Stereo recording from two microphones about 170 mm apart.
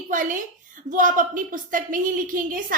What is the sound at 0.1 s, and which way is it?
A woman's voice, 50° right (ahead or behind).